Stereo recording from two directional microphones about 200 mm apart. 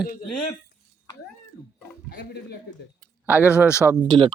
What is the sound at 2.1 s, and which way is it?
Speech, 55° left (ahead or behind).